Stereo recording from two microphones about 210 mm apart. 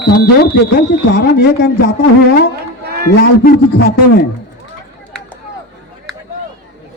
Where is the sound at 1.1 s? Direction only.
45° left (ahead or behind).